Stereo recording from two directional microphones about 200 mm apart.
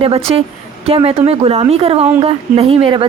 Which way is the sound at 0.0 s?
30° right (ahead or behind).